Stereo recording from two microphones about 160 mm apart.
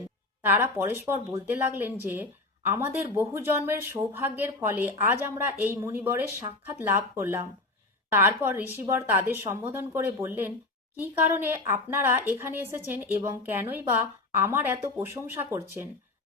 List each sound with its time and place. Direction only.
0.4 s speech: 15° right (ahead or behind)